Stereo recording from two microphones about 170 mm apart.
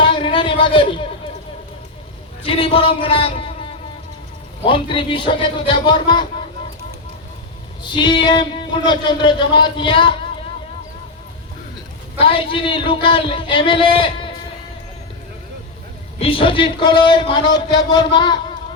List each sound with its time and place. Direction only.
0.0 s a sound: 30° left (ahead or behind)
2.4 s speech: 35° left (ahead or behind)
7.9 s speech: 30° left (ahead or behind)
12.2 s speech: 30° left (ahead or behind)
16.1 s speech: 35° left (ahead or behind)